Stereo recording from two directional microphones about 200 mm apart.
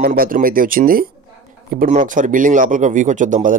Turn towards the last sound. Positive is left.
turn(degrees=-40)  # may be behind; listen again after turning